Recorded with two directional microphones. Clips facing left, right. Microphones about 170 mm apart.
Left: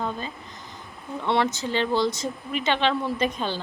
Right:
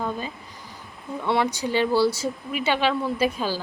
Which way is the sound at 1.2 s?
5° right (ahead or behind).